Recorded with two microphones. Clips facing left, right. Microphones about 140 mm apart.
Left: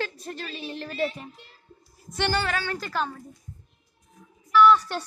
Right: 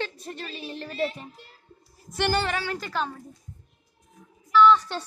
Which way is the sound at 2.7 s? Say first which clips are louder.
Even; centre (ahead or behind).